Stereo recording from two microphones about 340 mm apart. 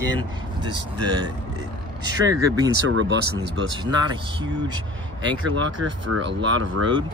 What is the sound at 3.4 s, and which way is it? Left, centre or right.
Speech, centre.